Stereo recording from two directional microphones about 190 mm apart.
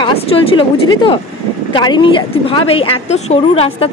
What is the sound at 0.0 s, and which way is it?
A woman's voice, 30° left (ahead or behind).